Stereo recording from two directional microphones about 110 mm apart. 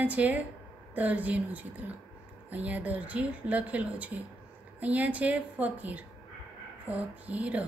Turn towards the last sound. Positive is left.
turn(degrees=-15)  # may be behind; listen again after turning